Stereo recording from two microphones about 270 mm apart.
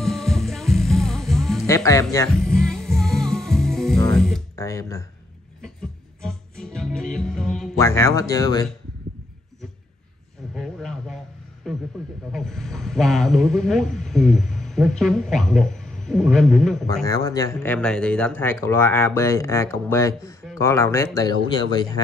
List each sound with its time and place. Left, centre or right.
0.0 s music: centre
1.8 s speech: centre
2.1 s music: centre
6.2 s music: centre
10.5 s a sound: centre
12.3 s speech: centre
17.0 s speech: centre